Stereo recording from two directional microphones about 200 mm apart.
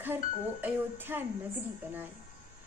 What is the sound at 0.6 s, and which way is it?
Speech, 10° right (ahead or behind).